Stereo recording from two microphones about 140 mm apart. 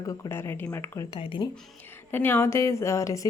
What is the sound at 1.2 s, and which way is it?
Speech, 40° left (ahead or behind).